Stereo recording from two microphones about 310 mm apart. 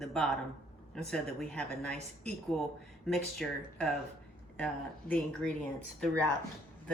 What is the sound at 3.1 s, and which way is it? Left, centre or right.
Speech, centre.